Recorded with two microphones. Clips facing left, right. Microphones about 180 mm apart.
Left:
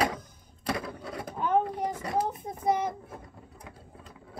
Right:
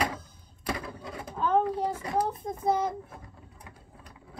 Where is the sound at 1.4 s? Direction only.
15° left (ahead or behind).